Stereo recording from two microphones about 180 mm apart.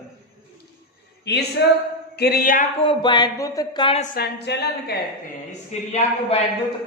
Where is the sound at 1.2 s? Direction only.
70° left (ahead or behind); by 2.7 s 50° left (ahead or behind).